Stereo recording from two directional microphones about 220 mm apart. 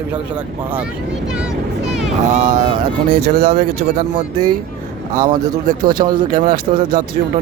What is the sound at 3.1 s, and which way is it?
Speech, 45° right (ahead or behind).